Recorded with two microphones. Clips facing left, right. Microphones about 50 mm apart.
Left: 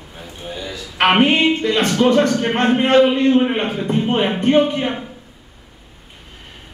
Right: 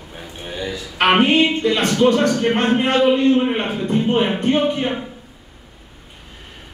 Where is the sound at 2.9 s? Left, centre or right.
Left.